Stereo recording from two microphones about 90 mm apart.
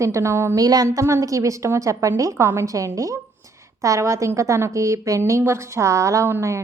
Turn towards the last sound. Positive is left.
turn(degrees=-30)  # may be behind; listen again after turning